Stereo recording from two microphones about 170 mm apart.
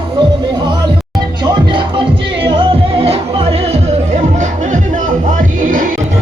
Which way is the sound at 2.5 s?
35° right (ahead or behind).